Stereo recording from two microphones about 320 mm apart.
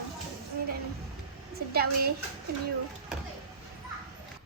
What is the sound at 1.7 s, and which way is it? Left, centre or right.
Speech, right.